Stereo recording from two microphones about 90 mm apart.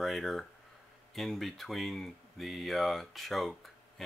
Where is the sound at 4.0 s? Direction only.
5° left (ahead or behind).